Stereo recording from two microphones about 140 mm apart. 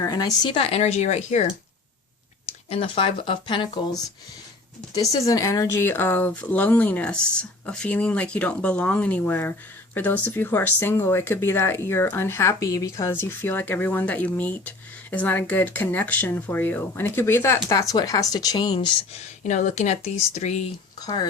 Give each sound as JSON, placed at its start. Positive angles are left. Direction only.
{"t": 0.0, "sound": "speech", "side_deg": 25}
{"t": 0.5, "sound": "speech", "side_deg": 45}
{"t": 2.6, "sound": "speech", "side_deg": 45}
{"t": 5.1, "sound": "speech", "side_deg": 25}
{"t": 19.4, "sound": "speech", "side_deg": 60}
{"t": 21.0, "sound": "speech", "side_deg": 30}